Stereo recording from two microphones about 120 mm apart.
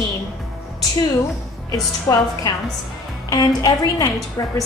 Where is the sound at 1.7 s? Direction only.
30° left (ahead or behind).